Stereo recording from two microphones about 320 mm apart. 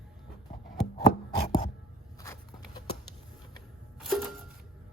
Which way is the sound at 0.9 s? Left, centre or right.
Centre.